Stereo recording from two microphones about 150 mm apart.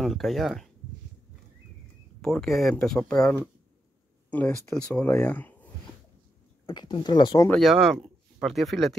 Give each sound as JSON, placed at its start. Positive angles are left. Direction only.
{"t": 0.0, "sound": "speech", "side_deg": 0}
{"t": 2.2, "sound": "speech", "side_deg": 0}
{"t": 6.6, "sound": "speech", "side_deg": 30}
{"t": 7.4, "sound": "speech", "side_deg": 0}